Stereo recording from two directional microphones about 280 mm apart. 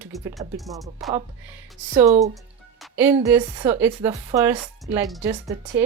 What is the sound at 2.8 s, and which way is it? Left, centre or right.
Music, centre.